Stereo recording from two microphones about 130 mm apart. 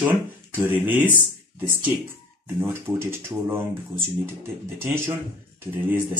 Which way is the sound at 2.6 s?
20° right (ahead or behind).